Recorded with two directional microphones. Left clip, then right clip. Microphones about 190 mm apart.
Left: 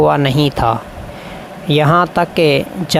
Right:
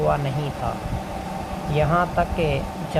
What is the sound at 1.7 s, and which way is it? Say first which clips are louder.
Speech: left 9 dB; 65° left (ahead or behind).